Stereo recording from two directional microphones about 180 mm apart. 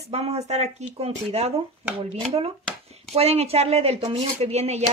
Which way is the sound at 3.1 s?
35° right (ahead or behind).